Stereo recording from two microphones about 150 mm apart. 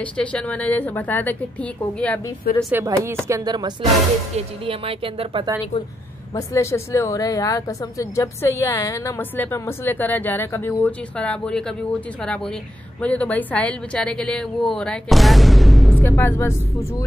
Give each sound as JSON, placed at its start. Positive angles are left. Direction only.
{"t": 0.0, "sound": "speech", "side_deg": 10}
{"t": 2.7, "sound": "speech", "side_deg": -20}
{"t": 4.4, "sound": "a woman's voice", "side_deg": -40}
{"t": 6.3, "sound": "speech", "side_deg": 20}
{"t": 13.0, "sound": "speech", "side_deg": 10}
{"t": 16.0, "sound": "speech", "side_deg": 15}